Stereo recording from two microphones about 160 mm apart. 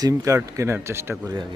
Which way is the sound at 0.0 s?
20° right (ahead or behind).